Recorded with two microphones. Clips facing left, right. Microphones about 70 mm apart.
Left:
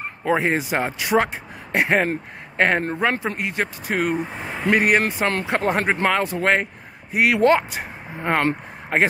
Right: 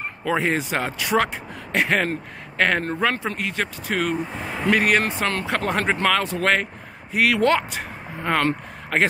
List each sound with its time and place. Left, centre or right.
0.2 s speech: left